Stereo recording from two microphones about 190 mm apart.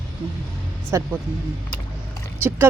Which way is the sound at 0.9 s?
15° right (ahead or behind).